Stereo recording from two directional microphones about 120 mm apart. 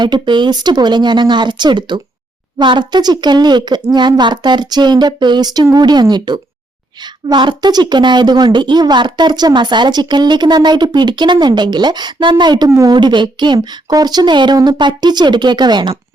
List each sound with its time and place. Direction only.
0.0 s a woman's voice: 40° right (ahead or behind)